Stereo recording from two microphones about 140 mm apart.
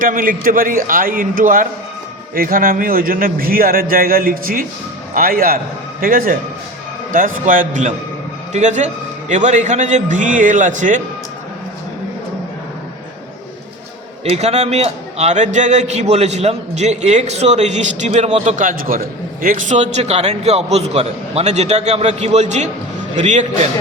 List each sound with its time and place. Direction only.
0.0 s a man's voice: 75° right (ahead or behind)
7.1 s a man's voice: 75° right (ahead or behind)
14.3 s a man's voice: 50° right (ahead or behind)